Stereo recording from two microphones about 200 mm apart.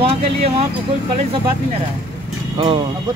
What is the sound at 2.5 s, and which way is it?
Speech, 25° right (ahead or behind).